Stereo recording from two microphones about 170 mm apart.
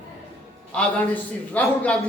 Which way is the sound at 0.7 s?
5° left (ahead or behind).